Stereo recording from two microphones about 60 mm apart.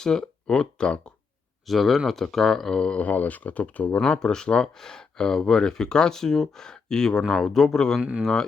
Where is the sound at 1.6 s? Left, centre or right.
Centre.